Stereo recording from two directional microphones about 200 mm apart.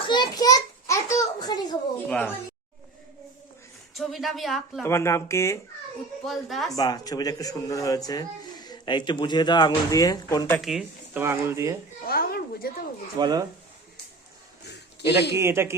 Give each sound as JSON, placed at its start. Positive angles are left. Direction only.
{"t": 0.1, "sound": "a sound", "side_deg": 20}
{"t": 2.0, "sound": "speech", "side_deg": 10}
{"t": 3.9, "sound": "a woman's voice", "side_deg": 0}
{"t": 4.8, "sound": "speech", "side_deg": 15}
{"t": 6.2, "sound": "a woman's voice", "side_deg": 0}
{"t": 6.7, "sound": "speech", "side_deg": 20}
{"t": 10.6, "sound": "speech", "side_deg": 0}
{"t": 12.0, "sound": "speech", "side_deg": 50}
{"t": 13.1, "sound": "speech", "side_deg": -20}
{"t": 15.4, "sound": "speech", "side_deg": -15}